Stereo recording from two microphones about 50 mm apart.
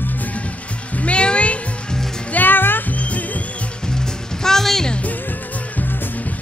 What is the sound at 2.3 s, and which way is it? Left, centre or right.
Music, left.